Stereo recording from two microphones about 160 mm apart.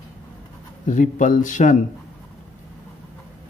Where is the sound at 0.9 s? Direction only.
50° left (ahead or behind).